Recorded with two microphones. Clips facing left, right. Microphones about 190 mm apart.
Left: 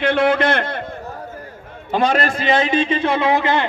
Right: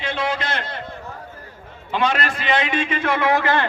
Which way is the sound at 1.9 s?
40° left (ahead or behind).